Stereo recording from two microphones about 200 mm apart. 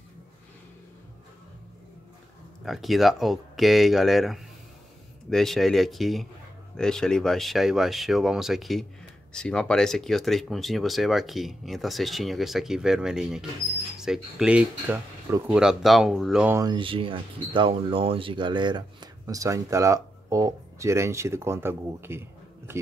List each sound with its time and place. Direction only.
2.6 s speech: centre (ahead or behind)
16.5 s speech: 20° right (ahead or behind)